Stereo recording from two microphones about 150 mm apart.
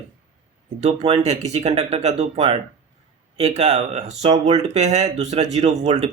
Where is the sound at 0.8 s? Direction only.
45° right (ahead or behind).